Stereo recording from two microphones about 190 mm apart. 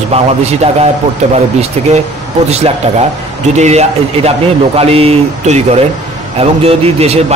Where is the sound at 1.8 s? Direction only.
35° right (ahead or behind).